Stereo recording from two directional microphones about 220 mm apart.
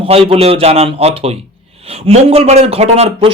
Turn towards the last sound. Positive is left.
turn(degrees=-25)  # may be behind; listen again after turning